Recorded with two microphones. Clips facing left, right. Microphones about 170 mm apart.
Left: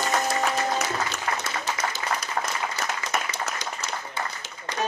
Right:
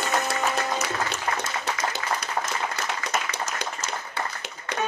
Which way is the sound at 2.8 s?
65° right (ahead or behind).